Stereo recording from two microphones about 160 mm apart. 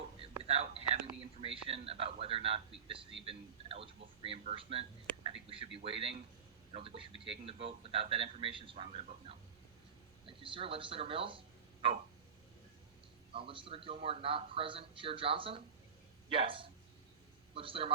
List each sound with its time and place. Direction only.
0.2 s whispering: 40° right (ahead or behind)
1.4 s speech: 35° right (ahead or behind)
13.3 s a man's voice: 35° right (ahead or behind)